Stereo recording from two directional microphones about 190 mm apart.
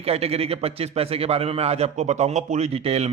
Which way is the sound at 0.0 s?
30° right (ahead or behind).